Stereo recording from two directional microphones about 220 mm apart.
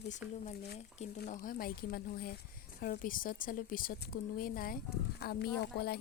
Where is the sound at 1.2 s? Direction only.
40° left (ahead or behind).